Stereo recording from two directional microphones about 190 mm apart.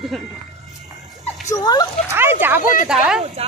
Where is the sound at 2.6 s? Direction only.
45° left (ahead or behind).